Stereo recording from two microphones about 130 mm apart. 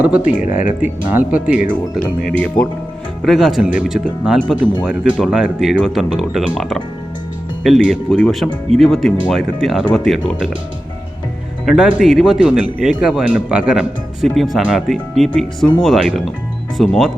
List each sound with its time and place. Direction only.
0.3 s speech: 75° left (ahead or behind)
0.8 s speech: 10° right (ahead or behind)
2.0 s speech: 10° left (ahead or behind)
3.2 s a man's voice: centre (ahead or behind)
11.6 s a man's voice: 5° right (ahead or behind)